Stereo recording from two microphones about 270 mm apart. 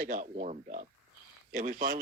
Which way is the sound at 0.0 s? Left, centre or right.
Right.